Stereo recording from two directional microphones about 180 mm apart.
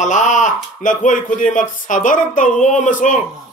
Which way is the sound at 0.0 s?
40° left (ahead or behind).